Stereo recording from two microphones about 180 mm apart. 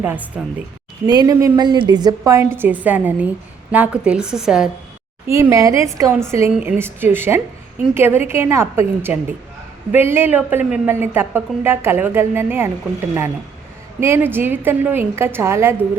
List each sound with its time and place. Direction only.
0.0 s a woman's voice: 10° right (ahead or behind)
1.0 s a woman's voice: 20° right (ahead or behind); by 4.7 s 5° right (ahead or behind)
5.3 s a woman's voice: 15° right (ahead or behind)
14.0 s a woman's voice: 10° right (ahead or behind)